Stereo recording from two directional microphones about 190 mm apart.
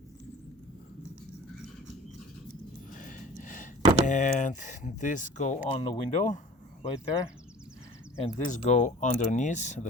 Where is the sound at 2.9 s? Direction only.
45° left (ahead or behind).